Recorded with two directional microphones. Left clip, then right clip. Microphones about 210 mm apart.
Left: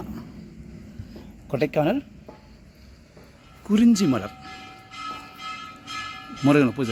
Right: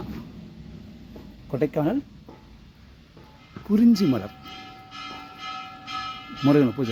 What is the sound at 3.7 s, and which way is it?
Speech, centre (ahead or behind).